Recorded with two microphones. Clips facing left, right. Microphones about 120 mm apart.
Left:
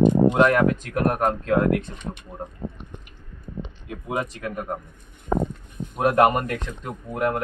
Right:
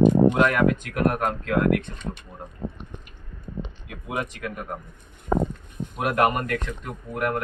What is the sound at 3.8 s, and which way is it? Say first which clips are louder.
Speech: left 3 dB; 30° left (ahead or behind).